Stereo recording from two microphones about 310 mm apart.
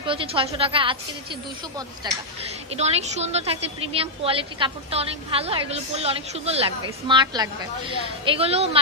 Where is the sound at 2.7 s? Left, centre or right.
Right.